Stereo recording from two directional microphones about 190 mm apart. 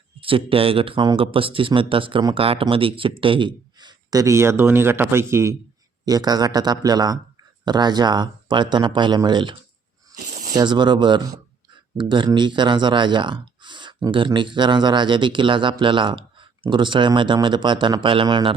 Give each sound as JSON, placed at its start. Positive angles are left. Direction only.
{"t": 0.2, "sound": "speech", "side_deg": -30}
{"t": 10.2, "sound": "a sound", "side_deg": -45}
{"t": 10.5, "sound": "speech", "side_deg": -20}